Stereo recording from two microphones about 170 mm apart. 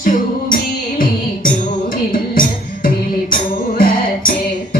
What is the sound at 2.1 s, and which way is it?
Music, 55° left (ahead or behind).